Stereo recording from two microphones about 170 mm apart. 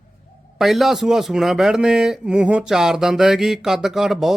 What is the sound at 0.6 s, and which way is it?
Speech, centre (ahead or behind).